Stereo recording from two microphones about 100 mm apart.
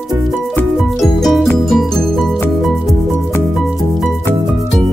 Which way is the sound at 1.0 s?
Centre (ahead or behind).